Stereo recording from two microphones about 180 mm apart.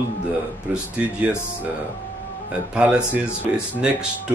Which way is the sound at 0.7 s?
10° right (ahead or behind).